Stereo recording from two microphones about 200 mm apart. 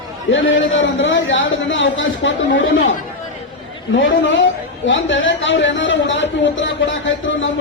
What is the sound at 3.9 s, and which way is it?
Speech, 70° left (ahead or behind).